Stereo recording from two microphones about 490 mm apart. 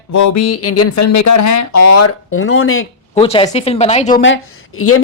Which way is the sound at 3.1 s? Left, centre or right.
Centre.